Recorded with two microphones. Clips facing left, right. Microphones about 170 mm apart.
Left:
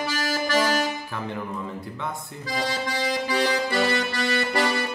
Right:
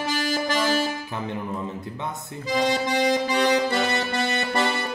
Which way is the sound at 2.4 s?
20° right (ahead or behind).